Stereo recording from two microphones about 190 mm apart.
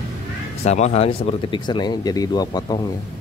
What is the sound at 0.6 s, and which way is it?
Speech, 35° left (ahead or behind).